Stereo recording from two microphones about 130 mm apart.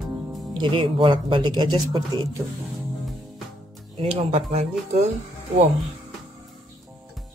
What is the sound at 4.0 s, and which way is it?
Speech, 45° right (ahead or behind).